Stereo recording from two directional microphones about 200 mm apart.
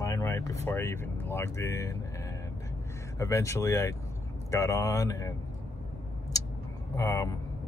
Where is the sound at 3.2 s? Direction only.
15° left (ahead or behind).